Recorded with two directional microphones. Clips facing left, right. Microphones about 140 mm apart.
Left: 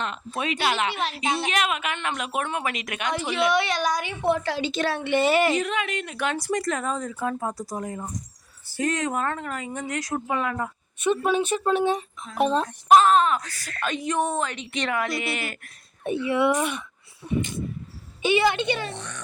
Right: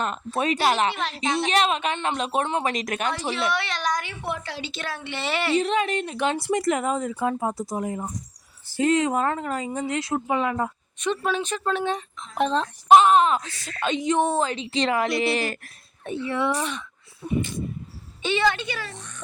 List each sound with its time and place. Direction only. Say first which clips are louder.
0.0 s a woman's voice: right 4 dB; 40° right (ahead or behind); by 2.7 s 25° right (ahead or behind)
2.7 s a woman's voice: right 2 dB; 40° right (ahead or behind)
3.3 s speech: left 4 dB; 15° left (ahead or behind)
4.4 s speech: left 7 dB; 45° left (ahead or behind)
5.5 s a woman's voice: right 4 dB; 30° right (ahead or behind)
11.0 s speech: left 3 dB; 10° left (ahead or behind)
13.2 s speech: right 2 dB; 25° right (ahead or behind)
16.2 s speech: left 3 dB; 10° left (ahead or behind)
17.2 s speech: right 1 dB; 20° right (ahead or behind)
18.2 s a woman's voice: left 2 dB; 10° left (ahead or behind)
18.9 s a child's voice: left 5 dB; 75° left (ahead or behind)